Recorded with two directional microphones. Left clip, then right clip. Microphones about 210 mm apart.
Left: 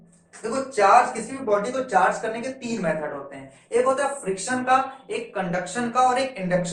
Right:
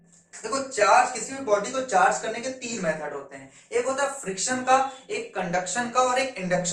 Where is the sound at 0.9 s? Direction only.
15° right (ahead or behind).